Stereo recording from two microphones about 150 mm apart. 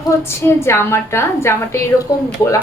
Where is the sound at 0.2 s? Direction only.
15° left (ahead or behind).